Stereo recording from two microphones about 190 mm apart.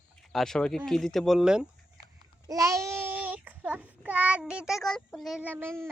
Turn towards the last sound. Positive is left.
turn(degrees=-15)  # may be behind; listen again after turning